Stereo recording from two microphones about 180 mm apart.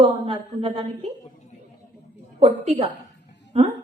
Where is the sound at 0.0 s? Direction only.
30° right (ahead or behind).